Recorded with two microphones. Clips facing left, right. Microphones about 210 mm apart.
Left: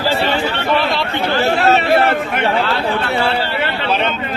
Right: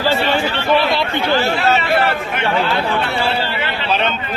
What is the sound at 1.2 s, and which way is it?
Chatter, 50° left (ahead or behind).